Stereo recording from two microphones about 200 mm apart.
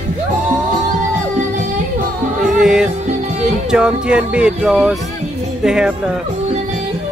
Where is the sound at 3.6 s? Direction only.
5° right (ahead or behind).